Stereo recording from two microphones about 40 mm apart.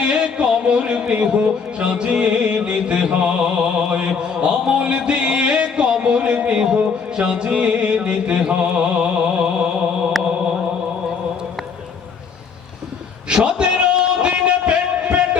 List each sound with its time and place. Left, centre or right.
0.2 s speech: right
6.7 s music: right
13.2 s a sound: right
13.6 s music: right